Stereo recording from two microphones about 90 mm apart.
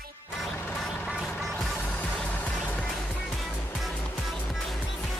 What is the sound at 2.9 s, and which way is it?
Music, 5° left (ahead or behind).